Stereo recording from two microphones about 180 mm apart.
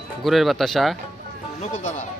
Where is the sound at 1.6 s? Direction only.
40° left (ahead or behind).